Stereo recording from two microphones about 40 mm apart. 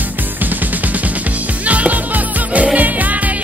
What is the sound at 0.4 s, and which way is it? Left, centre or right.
Music, right.